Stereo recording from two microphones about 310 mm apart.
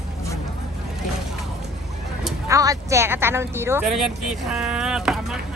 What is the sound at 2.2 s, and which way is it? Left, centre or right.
Speech, centre.